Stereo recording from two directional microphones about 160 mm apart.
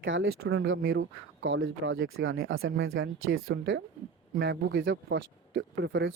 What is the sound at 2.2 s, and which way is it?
Speech, 90° right.